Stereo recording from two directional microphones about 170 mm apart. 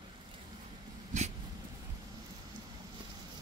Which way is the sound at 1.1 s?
45° right (ahead or behind).